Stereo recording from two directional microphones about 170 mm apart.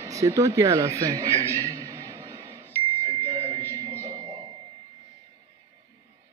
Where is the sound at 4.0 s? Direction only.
20° right (ahead or behind).